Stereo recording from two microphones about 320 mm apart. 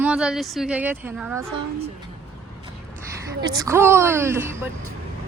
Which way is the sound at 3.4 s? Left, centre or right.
Centre.